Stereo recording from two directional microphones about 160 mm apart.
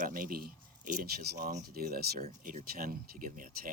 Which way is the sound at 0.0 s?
60° right (ahead or behind).